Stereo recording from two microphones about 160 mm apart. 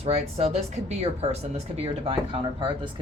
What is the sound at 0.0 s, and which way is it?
Speech, 40° right (ahead or behind).